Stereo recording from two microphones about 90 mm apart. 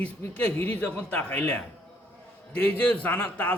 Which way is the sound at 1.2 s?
25° left (ahead or behind).